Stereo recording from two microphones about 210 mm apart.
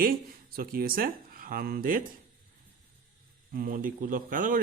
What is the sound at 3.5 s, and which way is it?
Speech, 40° right (ahead or behind).